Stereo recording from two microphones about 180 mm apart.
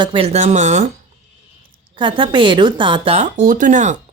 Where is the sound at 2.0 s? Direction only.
25° right (ahead or behind).